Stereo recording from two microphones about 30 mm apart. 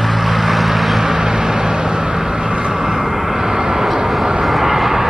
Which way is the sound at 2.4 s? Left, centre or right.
Right.